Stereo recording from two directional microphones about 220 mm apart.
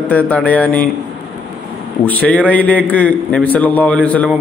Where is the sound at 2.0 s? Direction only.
5° left (ahead or behind).